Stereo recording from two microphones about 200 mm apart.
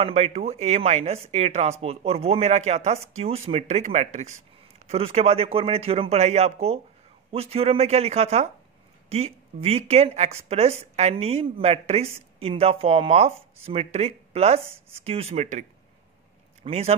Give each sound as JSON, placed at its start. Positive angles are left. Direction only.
{"t": 0.0, "sound": "speech", "side_deg": -30}
{"t": 16.6, "sound": "speech", "side_deg": -30}